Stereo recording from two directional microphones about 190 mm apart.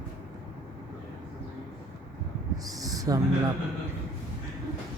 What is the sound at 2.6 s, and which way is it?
Owl, 20° right (ahead or behind).